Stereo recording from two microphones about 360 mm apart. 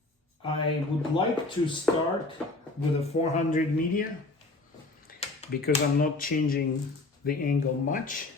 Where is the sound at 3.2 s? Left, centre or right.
Centre.